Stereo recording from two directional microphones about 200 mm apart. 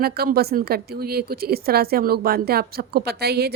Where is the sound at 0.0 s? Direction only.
50° right (ahead or behind).